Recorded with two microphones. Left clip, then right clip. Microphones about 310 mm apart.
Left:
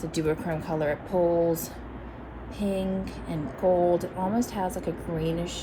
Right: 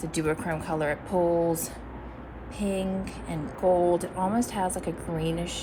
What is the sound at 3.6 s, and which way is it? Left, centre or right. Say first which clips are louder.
Speech: even; right.